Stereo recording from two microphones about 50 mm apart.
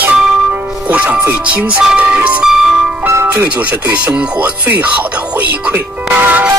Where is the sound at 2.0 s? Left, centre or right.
Right.